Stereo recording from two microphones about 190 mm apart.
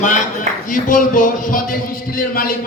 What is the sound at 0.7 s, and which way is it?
A man's voice, 45° left (ahead or behind).